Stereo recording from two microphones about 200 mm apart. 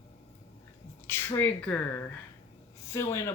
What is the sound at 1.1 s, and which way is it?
Speech, 10° left (ahead or behind).